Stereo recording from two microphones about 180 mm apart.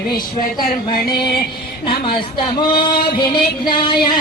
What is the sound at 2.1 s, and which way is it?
Child singing, 25° left (ahead or behind).